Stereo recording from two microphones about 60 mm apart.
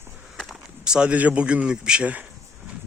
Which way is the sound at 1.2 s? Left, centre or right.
Right.